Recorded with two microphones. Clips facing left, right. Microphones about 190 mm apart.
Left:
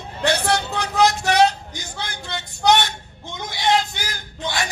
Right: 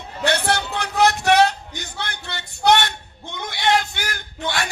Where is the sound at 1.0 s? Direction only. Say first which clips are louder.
Right 1 dB; 60° right (ahead or behind).